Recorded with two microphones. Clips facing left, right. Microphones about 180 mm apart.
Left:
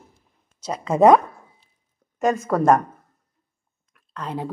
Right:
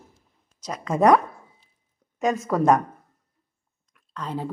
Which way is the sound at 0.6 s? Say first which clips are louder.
Left 4 dB; 25° left (ahead or behind).